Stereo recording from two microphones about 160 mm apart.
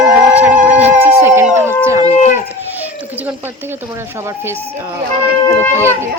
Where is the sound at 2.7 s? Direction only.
10° right (ahead or behind).